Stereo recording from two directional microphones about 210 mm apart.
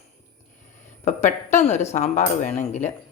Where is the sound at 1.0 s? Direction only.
35° left (ahead or behind).